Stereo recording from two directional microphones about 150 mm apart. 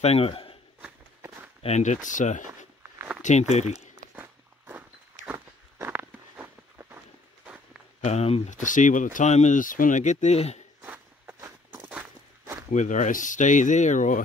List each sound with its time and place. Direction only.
0.0 s speech: 40° left (ahead or behind)
0.8 s walk: 15° right (ahead or behind)
1.6 s speech: 50° left (ahead or behind)
4.1 s walk: 10° right (ahead or behind)
8.0 s speech: 45° left (ahead or behind)
8.5 s speech: 60° left (ahead or behind)
10.8 s walk: 15° right (ahead or behind)
12.7 s speech: 55° left (ahead or behind)